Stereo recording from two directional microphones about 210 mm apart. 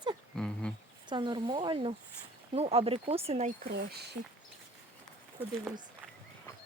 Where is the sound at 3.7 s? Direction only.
50° right (ahead or behind).